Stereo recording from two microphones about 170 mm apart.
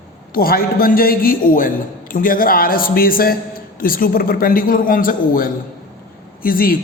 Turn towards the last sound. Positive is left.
turn(degrees=55)  # may be behind; listen again after turning